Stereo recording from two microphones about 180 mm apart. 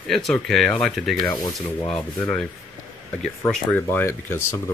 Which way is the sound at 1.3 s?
20° left (ahead or behind).